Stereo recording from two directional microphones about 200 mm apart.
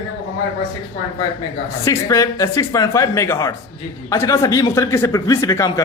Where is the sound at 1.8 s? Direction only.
15° left (ahead or behind).